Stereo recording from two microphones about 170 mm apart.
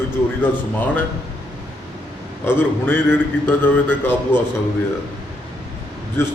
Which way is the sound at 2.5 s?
10° left (ahead or behind).